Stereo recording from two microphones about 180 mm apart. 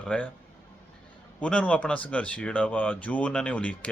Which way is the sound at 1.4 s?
5° left (ahead or behind).